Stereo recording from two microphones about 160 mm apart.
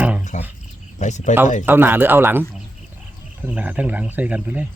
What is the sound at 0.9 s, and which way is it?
Speech, 50° left (ahead or behind).